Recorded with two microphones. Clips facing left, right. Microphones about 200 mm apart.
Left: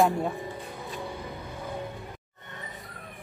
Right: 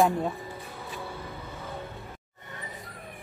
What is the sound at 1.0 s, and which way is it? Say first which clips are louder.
Vehicle: left 2 dB; 15° left (ahead or behind).